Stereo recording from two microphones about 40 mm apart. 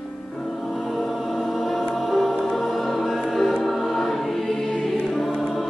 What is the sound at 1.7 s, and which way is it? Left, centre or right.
Choir, centre.